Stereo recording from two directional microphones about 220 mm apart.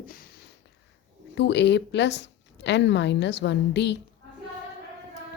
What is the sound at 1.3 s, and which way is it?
A woman's voice, 50° left (ahead or behind).